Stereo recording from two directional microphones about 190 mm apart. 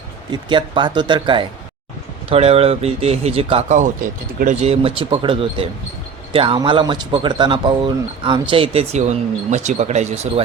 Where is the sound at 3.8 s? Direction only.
45° right (ahead or behind).